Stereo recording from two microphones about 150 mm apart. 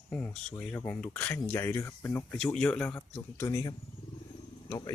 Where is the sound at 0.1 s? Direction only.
10° left (ahead or behind).